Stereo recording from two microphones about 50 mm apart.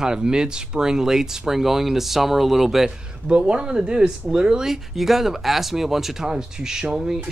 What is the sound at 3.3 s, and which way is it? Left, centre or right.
Speech, right.